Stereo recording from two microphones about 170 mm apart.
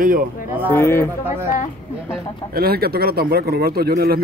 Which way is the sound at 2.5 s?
65° right (ahead or behind).